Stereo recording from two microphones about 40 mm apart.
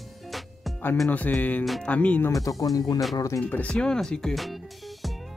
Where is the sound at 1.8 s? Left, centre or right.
Left.